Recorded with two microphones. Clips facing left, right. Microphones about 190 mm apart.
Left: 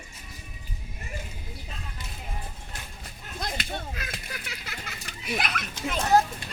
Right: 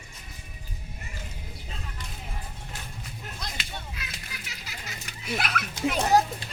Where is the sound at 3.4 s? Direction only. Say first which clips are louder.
Left 9 dB; 50° left (ahead or behind).